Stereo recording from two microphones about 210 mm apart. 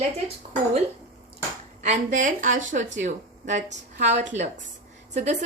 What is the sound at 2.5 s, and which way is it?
Speech, 65° right (ahead or behind).